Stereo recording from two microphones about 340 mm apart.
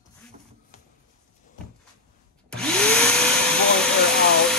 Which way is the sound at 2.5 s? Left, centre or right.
Centre.